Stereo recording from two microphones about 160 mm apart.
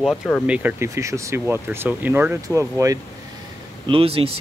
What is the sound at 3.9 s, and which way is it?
Speech, 35° right (ahead or behind).